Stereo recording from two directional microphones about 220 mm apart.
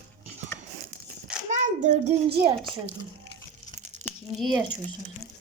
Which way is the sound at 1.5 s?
35° right (ahead or behind).